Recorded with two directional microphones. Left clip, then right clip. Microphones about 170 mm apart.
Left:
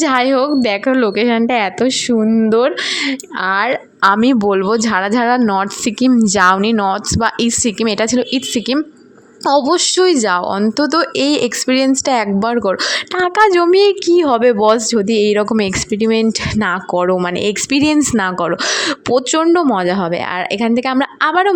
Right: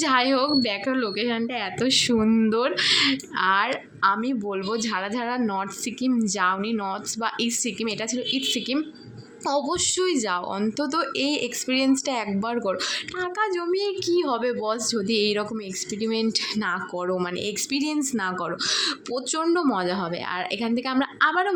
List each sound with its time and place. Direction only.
0.0 s speech: 40° left (ahead or behind)
2.1 s speech: 25° left (ahead or behind)
2.5 s speech: 40° left (ahead or behind)
4.0 s speech: 50° left (ahead or behind)
13.2 s speech: 60° left (ahead or behind)